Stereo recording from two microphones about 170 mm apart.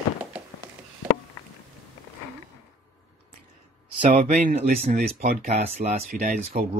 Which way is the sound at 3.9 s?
45° right (ahead or behind).